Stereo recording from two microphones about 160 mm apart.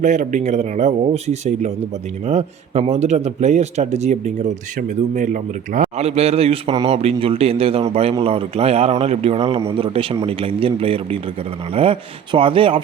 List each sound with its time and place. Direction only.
0.0 s a man's voice: 50° right (ahead or behind)
6.1 s a man's voice: 40° right (ahead or behind)